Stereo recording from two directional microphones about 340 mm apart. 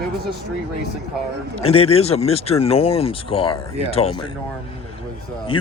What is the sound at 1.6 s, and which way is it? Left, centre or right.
Speech, centre.